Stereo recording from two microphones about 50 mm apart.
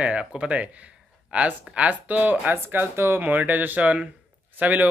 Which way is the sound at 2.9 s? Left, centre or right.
Right.